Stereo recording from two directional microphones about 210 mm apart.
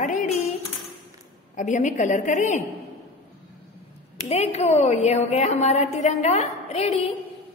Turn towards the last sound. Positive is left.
turn(degrees=30)  # may be behind; listen again after turning